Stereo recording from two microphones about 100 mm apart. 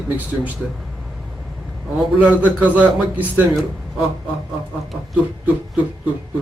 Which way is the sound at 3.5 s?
Centre (ahead or behind).